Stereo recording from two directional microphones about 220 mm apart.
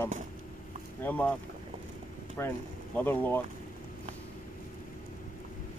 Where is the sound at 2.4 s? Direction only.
10° left (ahead or behind).